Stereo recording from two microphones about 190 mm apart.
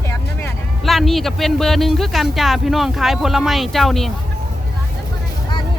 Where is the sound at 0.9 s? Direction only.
Centre (ahead or behind).